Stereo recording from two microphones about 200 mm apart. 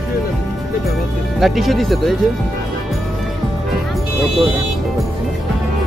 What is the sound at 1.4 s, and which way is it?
Speech, centre (ahead or behind).